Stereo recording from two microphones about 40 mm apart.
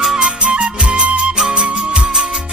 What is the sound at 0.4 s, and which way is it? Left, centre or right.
Music, right.